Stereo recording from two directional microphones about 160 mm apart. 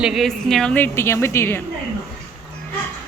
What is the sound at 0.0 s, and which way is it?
A woman's voice, centre (ahead or behind).